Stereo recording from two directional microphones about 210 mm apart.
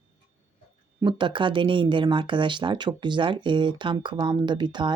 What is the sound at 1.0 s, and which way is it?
Speech, 20° right (ahead or behind).